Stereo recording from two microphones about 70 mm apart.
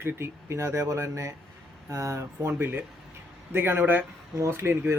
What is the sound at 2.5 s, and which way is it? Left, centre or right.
Speech, right.